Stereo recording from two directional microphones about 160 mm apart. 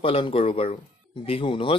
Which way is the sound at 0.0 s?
35° left (ahead or behind).